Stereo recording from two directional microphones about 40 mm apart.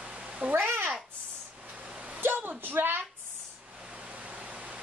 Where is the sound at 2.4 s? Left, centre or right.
Right.